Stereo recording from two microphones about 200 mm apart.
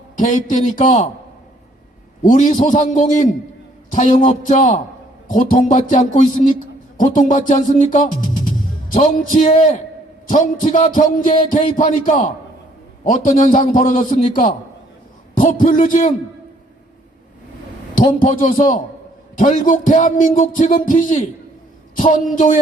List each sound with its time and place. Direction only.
0.2 s speech: 40° left (ahead or behind)
2.2 s speech: 40° left (ahead or behind)
17.9 s a woman's voice: 40° left (ahead or behind)